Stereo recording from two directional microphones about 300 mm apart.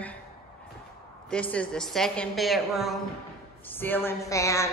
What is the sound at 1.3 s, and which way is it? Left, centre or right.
A woman's voice, centre.